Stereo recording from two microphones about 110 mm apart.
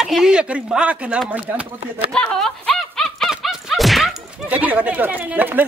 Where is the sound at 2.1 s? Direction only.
5° left (ahead or behind).